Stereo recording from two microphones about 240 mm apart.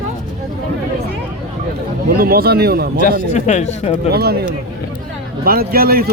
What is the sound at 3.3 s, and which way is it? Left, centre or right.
Speech, left.